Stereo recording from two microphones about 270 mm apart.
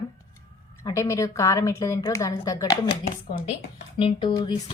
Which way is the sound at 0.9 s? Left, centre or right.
Centre.